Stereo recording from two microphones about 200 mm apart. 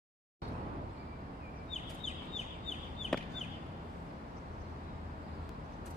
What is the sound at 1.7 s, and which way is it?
Chicken, 35° left (ahead or behind).